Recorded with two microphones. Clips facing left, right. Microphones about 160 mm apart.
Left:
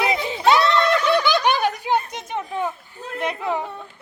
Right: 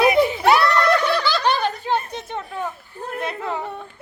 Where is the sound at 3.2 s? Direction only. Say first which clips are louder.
Left 3 dB; 15° left (ahead or behind).